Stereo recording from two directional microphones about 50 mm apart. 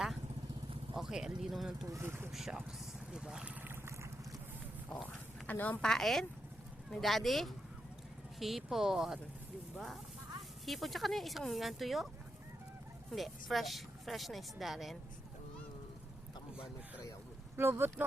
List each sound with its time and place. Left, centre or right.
0.9 s speech: centre
2.0 s speech: right
2.3 s speech: centre
5.0 s a sound: left
5.8 s speech: centre
13.1 s speech: centre
17.6 s speech: right